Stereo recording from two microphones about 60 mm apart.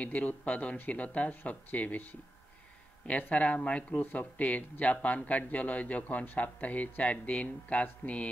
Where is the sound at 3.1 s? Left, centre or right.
Left.